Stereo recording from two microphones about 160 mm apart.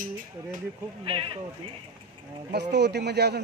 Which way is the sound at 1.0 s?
35° right (ahead or behind).